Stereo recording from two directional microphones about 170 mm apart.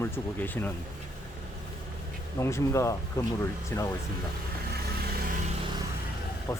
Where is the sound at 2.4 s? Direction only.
15° left (ahead or behind).